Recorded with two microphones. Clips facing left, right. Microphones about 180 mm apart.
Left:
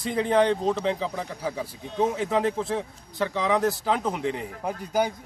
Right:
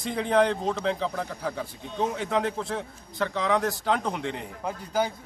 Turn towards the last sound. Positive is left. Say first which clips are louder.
# left 2 dB
turn(degrees=15)  # may be behind; listen again after turning